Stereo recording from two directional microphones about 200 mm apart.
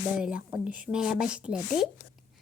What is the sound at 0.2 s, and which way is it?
A woman's voice, 5° right (ahead or behind).